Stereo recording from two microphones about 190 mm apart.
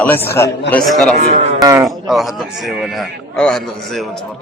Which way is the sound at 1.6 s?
20° right (ahead or behind).